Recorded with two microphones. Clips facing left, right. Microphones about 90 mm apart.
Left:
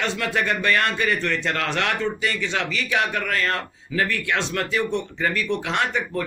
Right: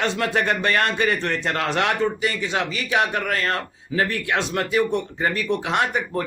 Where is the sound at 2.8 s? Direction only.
35° right (ahead or behind).